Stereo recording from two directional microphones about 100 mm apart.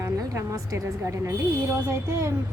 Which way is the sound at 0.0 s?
30° right (ahead or behind).